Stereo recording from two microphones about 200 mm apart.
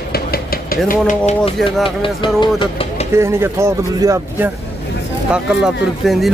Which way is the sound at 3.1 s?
15° right (ahead or behind).